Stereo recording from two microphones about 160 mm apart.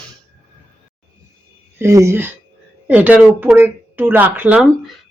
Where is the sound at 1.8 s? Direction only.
20° right (ahead or behind).